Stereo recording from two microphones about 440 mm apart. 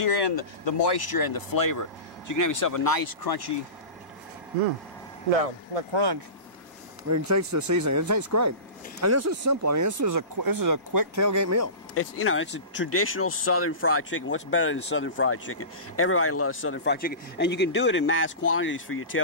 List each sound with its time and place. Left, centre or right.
0.0 s speech: left
5.9 s speech: right
7.1 s speech: right
11.9 s speech: left